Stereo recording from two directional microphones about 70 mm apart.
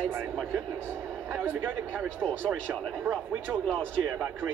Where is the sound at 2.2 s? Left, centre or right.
Centre.